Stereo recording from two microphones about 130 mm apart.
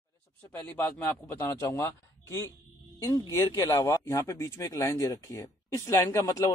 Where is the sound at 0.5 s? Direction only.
15° left (ahead or behind).